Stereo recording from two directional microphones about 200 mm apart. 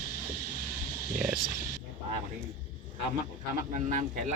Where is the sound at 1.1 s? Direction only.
45° right (ahead or behind).